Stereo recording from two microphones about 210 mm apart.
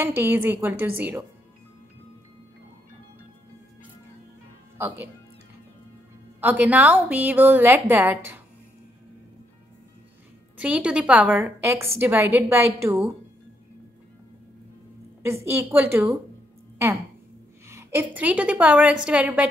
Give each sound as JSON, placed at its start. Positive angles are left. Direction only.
{"t": 0.0, "sound": "a woman's voice", "side_deg": -10}
{"t": 4.7, "sound": "a woman's voice", "side_deg": -10}
{"t": 6.4, "sound": "a woman's voice", "side_deg": -10}
{"t": 10.6, "sound": "a woman's voice", "side_deg": -5}
{"t": 15.2, "sound": "a woman's voice", "side_deg": -10}